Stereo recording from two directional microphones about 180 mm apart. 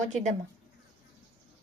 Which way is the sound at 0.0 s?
40° right (ahead or behind).